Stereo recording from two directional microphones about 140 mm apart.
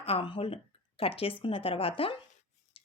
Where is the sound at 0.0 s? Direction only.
40° left (ahead or behind).